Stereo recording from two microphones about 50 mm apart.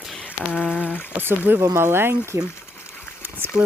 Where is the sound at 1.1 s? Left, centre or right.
Right.